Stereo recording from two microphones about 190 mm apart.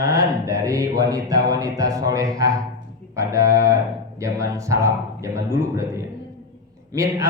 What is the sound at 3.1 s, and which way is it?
Speech, 15° right (ahead or behind).